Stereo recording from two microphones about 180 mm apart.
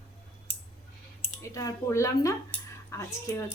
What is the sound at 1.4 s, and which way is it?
A woman's voice, 15° left (ahead or behind).